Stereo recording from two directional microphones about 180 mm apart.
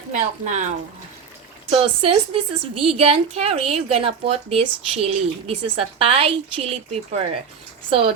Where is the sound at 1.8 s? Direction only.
30° right (ahead or behind).